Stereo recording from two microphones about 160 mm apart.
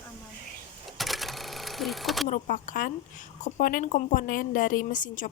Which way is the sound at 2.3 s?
55° left (ahead or behind).